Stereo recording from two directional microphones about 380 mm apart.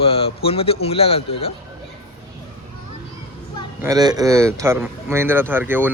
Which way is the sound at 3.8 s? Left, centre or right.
Centre.